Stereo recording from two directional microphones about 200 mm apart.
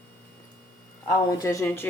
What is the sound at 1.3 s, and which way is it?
Speech, 15° left (ahead or behind).